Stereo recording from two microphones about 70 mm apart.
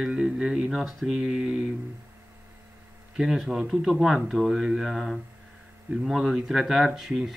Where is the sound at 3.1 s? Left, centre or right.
Centre.